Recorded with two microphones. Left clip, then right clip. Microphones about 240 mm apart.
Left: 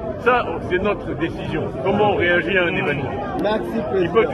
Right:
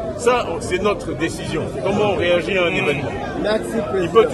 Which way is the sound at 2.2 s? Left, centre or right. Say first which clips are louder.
Even; right.